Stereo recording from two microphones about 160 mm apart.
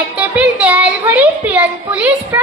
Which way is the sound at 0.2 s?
10° right (ahead or behind).